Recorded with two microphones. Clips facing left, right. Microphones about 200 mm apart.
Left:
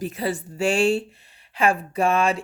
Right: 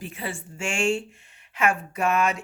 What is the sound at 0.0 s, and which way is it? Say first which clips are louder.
Speech: left 8 dB; 40° left (ahead or behind).